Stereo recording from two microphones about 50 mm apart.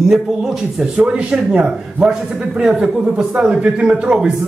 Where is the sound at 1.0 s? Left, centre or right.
Right.